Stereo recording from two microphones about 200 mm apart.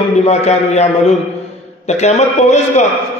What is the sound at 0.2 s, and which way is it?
A man's voice, 35° left (ahead or behind).